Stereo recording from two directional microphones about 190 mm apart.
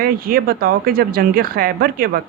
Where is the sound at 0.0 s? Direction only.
50° right (ahead or behind).